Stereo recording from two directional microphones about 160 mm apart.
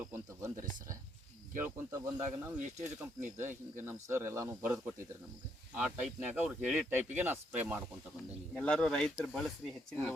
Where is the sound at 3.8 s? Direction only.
15° right (ahead or behind).